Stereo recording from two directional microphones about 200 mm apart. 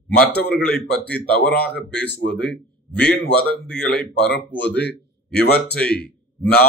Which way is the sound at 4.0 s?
50° left (ahead or behind).